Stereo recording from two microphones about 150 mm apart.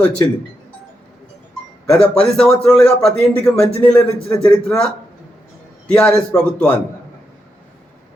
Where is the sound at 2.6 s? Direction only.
5° left (ahead or behind).